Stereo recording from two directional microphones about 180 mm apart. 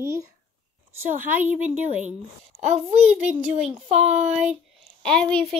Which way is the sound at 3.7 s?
35° right (ahead or behind).